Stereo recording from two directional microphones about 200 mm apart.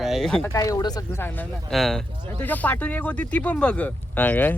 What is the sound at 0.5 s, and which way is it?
Speech, 15° left (ahead or behind).